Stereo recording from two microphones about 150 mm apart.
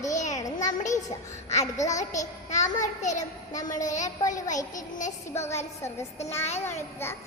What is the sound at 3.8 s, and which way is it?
Speech, 55° left (ahead or behind).